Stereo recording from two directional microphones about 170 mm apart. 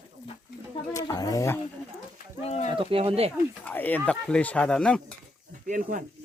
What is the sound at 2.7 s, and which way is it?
Speech, 30° right (ahead or behind).